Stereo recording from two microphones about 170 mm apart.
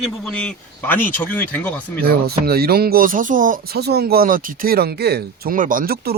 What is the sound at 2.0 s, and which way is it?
Speech, 65° right (ahead or behind).